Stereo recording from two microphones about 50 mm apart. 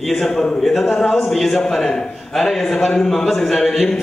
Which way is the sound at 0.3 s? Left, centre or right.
Centre.